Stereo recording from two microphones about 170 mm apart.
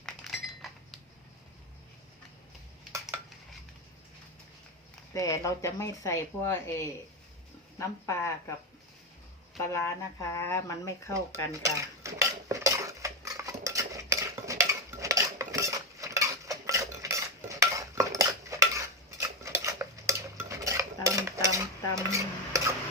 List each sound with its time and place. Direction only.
0.0 s a sound: centre (ahead or behind)
5.1 s speech: 20° left (ahead or behind)
9.6 s speech: 15° left (ahead or behind)
11.6 s cutlery: 20° right (ahead or behind)
19.2 s stir: 15° right (ahead or behind)